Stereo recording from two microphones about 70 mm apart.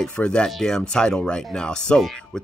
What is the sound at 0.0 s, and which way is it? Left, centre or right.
Speech, centre.